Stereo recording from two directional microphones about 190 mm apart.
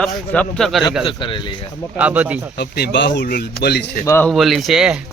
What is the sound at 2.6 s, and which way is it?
Speech, 60° left (ahead or behind).